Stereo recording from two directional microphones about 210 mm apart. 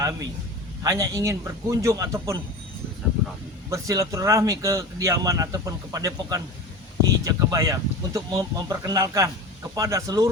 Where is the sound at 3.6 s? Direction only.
15° right (ahead or behind).